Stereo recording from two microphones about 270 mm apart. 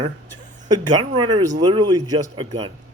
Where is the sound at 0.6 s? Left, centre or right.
Centre.